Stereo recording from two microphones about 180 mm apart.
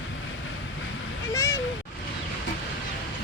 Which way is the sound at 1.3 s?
15° left (ahead or behind).